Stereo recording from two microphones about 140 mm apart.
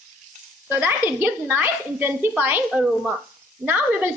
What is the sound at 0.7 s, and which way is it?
A woman's voice, 15° right (ahead or behind).